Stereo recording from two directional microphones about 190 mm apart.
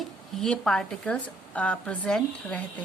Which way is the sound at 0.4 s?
5° left (ahead or behind).